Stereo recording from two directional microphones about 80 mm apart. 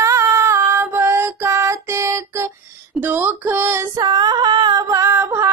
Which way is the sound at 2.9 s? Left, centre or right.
Right.